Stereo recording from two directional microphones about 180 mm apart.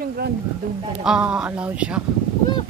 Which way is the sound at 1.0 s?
5° right (ahead or behind).